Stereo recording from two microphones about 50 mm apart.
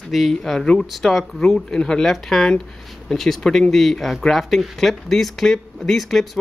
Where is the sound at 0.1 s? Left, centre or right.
Centre.